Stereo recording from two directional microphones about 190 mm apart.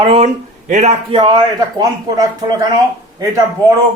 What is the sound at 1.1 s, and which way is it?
A man's voice, 25° right (ahead or behind).